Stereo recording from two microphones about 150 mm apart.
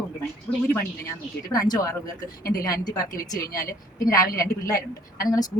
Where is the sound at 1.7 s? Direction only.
25° left (ahead or behind).